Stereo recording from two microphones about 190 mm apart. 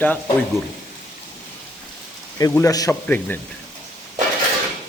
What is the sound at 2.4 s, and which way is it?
A man's voice, 15° left (ahead or behind).